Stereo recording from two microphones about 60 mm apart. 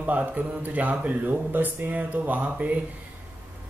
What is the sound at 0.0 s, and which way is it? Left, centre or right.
Speech, right.